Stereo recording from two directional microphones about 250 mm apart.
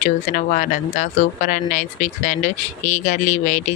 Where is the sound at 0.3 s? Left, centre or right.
Left.